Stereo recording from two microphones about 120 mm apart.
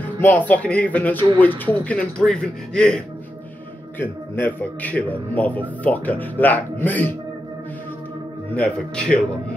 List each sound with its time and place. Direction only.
0.0 s a man's voice: 15° left (ahead or behind)
4.0 s a man's voice: 15° left (ahead or behind)
8.5 s a man's voice: 10° left (ahead or behind)